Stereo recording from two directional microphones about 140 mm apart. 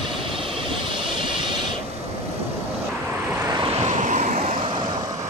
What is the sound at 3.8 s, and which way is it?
Vehicle, 60° right (ahead or behind).